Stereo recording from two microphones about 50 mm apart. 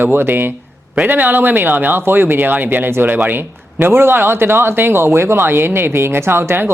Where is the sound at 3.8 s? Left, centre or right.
Right.